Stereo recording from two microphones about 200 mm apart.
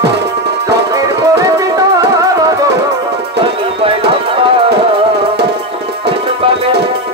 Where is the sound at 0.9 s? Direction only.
15° right (ahead or behind).